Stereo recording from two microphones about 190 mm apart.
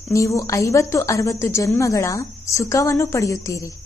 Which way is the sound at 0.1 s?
15° left (ahead or behind).